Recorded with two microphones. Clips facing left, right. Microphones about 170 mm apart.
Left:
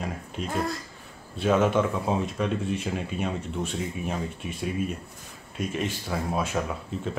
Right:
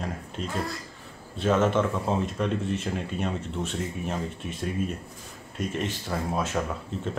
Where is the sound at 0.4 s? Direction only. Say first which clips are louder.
Left 3 dB; 10° left (ahead or behind).